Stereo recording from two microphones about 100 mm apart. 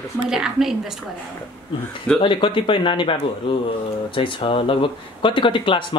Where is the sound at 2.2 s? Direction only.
55° left (ahead or behind).